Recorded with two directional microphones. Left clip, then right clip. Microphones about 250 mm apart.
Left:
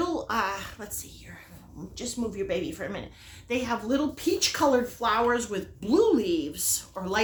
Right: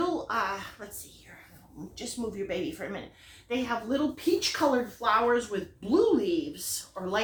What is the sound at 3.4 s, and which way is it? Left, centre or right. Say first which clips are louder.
Speech: left 2 dB; left.